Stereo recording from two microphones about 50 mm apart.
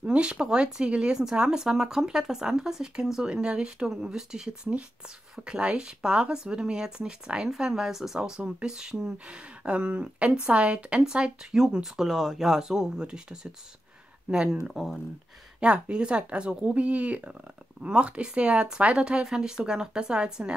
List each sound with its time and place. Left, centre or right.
0.0 s speech: right
14.7 s speech: centre
15.6 s speech: centre